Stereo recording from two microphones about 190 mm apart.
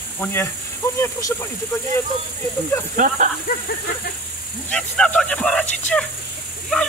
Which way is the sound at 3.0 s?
45° right (ahead or behind).